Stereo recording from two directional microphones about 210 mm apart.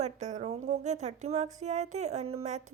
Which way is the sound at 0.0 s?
35° right (ahead or behind).